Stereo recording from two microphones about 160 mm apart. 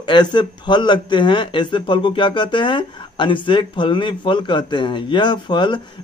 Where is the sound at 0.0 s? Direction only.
30° left (ahead or behind).